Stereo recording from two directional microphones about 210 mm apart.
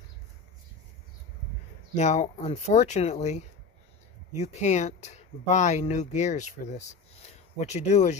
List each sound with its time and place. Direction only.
2.0 s speech: 35° left (ahead or behind)